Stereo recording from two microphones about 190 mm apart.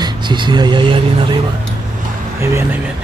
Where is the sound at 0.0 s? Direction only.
25° right (ahead or behind).